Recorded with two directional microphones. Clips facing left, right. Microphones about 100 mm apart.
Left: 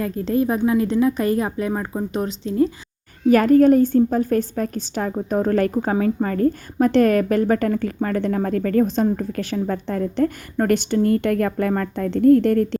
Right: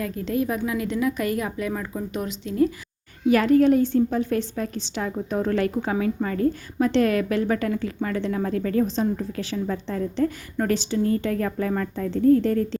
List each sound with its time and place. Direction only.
0.0 s a woman's voice: 35° left (ahead or behind)
3.2 s a woman's voice: 45° left (ahead or behind); by 12.8 s 60° left (ahead or behind)